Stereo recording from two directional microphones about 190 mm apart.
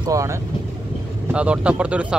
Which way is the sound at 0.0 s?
15° right (ahead or behind).